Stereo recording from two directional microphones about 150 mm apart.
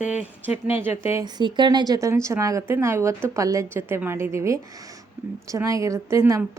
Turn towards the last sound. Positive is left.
turn(degrees=-20)  # may be behind; listen again after turning